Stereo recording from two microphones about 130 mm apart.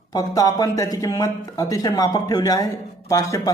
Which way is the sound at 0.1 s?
30° left (ahead or behind).